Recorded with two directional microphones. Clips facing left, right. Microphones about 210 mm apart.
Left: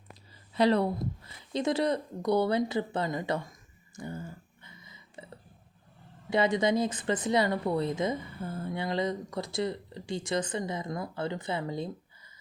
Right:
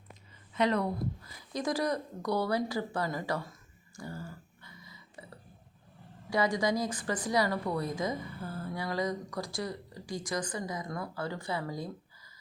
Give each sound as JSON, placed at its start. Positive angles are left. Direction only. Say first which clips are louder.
{"t": 0.5, "sound": "speech", "louder": "left 4 dB", "side_deg": 35}
{"t": 3.9, "sound": "a sound", "louder": "left 3 dB", "side_deg": 20}
{"t": 6.3, "sound": "speech", "louder": "left 3 dB", "side_deg": 25}